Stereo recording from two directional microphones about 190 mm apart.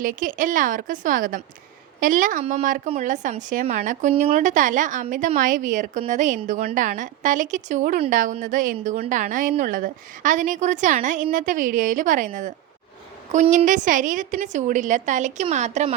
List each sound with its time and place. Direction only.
0.0 s a woman's voice: 45° right (ahead or behind)